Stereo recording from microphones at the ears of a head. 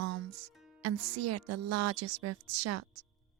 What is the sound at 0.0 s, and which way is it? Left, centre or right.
Speech, right.